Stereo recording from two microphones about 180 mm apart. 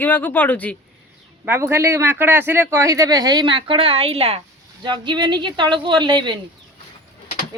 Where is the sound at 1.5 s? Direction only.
15° right (ahead or behind).